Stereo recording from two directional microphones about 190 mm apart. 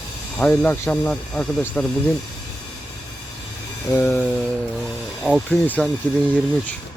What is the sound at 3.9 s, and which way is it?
Speech, 10° left (ahead or behind).